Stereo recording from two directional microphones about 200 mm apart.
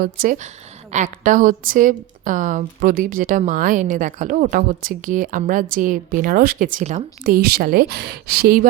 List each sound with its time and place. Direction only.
0.0 s a woman's voice: 45° right (ahead or behind)